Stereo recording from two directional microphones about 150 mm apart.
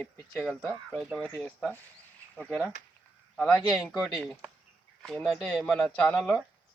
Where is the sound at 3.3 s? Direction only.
10° left (ahead or behind).